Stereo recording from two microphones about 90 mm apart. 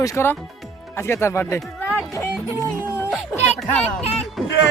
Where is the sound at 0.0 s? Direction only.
35° left (ahead or behind).